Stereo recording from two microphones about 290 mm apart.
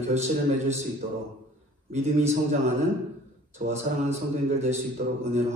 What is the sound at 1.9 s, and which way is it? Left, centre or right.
Speech, right.